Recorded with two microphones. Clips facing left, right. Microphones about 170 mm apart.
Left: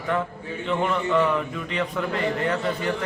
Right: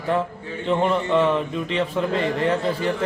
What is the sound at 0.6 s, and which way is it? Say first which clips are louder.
A man's voice: right 4 dB; 30° right (ahead or behind).